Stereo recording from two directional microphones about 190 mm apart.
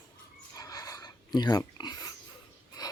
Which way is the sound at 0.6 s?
20° left (ahead or behind).